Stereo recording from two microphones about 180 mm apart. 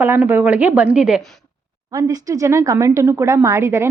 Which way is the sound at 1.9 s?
20° right (ahead or behind).